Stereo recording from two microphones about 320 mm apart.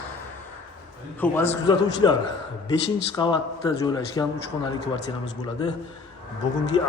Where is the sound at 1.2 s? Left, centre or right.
Centre.